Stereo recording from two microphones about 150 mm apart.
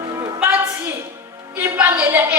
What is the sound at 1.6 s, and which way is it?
Speech, 10° right (ahead or behind).